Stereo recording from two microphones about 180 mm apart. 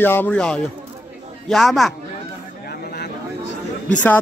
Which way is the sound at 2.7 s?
65° left (ahead or behind).